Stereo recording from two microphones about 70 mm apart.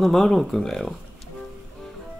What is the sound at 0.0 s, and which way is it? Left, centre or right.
Speech, centre.